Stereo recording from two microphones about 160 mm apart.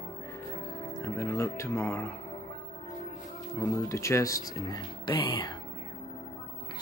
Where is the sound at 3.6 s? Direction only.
20° left (ahead or behind).